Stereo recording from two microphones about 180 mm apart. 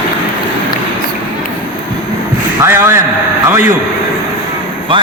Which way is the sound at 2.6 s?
15° right (ahead or behind).